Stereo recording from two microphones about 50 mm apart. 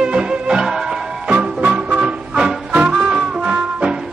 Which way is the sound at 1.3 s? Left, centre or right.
Right.